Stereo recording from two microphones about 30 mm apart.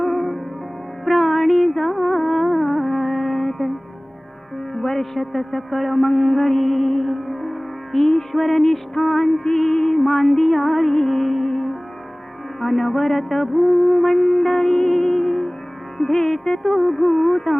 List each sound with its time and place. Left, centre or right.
0.0 s music: centre
2.3 s music: centre
4.8 s music: centre
16.6 s music: centre